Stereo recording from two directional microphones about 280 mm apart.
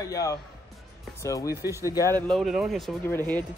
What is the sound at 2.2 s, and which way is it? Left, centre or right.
Speech, centre.